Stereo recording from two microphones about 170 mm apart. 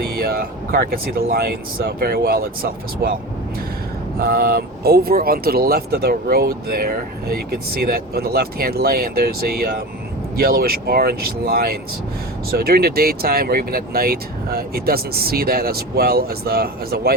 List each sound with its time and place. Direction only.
0.0 s speech: 65° right (ahead or behind)
4.2 s speech: 65° right (ahead or behind)